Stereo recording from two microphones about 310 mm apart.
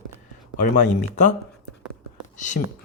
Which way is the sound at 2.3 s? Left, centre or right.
Left.